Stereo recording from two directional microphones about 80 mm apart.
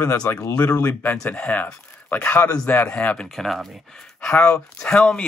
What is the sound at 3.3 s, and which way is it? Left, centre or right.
Speech, centre.